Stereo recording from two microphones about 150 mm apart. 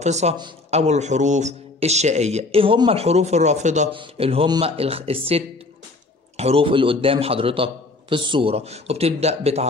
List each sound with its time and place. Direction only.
0.0 s a man's voice: 50° right (ahead or behind)
3.9 s a man's voice: 35° right (ahead or behind)